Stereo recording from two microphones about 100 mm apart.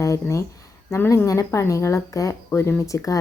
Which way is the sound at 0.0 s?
30° left (ahead or behind).